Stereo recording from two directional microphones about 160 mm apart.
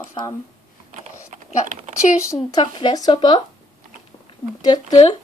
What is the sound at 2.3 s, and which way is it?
Speech, 25° left (ahead or behind).